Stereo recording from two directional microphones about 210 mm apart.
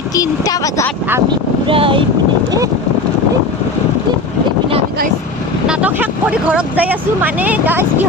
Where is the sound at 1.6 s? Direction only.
25° right (ahead or behind).